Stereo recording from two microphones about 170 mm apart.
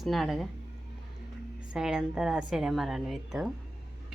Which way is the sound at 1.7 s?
5° right (ahead or behind).